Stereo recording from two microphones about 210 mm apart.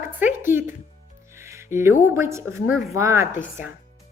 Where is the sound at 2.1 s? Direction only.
15° right (ahead or behind).